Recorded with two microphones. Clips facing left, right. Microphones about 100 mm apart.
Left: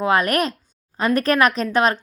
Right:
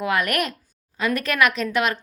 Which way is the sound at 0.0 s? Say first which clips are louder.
Left 4 dB; 30° left (ahead or behind).